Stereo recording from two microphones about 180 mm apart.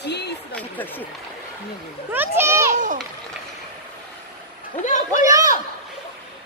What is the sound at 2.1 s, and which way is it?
Speech, 10° right (ahead or behind).